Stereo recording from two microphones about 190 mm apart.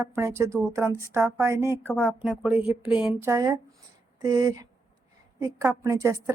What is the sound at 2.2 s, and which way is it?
A woman's voice, 10° right (ahead or behind).